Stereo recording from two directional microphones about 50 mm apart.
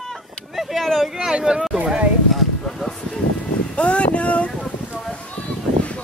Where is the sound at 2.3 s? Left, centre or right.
Centre.